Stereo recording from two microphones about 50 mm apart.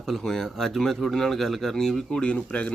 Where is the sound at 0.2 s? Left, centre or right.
Centre.